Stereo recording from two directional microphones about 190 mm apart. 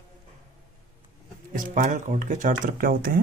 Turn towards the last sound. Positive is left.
turn(degrees=-50)  # may be behind; listen again after turning